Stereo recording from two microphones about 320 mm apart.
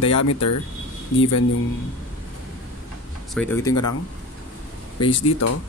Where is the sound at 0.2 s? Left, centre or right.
Left.